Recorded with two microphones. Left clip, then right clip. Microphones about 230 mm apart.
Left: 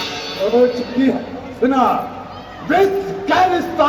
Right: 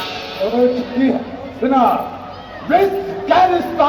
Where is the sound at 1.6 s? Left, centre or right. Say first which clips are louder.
Right 1 dB; left.